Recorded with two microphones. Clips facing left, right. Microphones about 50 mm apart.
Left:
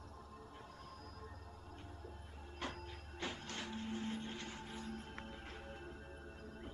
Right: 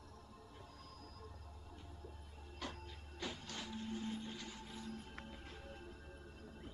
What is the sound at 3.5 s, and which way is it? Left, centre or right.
Music, left.